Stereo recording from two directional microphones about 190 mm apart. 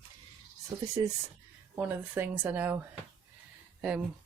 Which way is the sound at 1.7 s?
10° right (ahead or behind).